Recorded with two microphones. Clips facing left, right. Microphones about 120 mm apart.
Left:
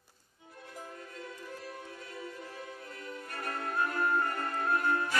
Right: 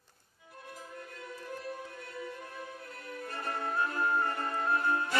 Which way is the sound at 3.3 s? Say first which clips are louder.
Right 1 dB; 25° right (ahead or behind).